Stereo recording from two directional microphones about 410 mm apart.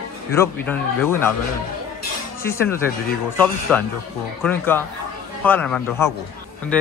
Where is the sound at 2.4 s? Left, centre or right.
Centre.